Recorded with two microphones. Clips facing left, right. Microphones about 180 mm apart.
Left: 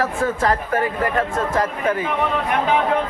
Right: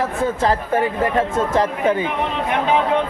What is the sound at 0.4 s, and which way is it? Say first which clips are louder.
Speech: right 3 dB; 25° right (ahead or behind).